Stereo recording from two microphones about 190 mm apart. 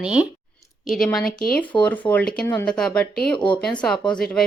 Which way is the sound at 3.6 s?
5° left (ahead or behind).